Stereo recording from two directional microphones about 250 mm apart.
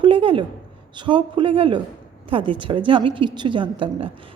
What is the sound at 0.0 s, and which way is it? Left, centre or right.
A woman's voice, right.